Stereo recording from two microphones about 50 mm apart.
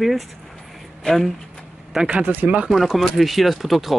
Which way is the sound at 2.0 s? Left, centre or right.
Right.